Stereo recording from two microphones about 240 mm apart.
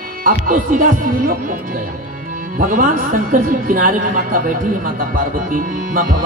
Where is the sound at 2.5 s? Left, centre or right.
Right.